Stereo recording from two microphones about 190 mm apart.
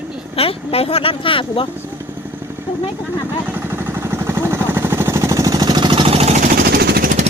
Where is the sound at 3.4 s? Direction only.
10° right (ahead or behind); by 7.1 s 55° right (ahead or behind).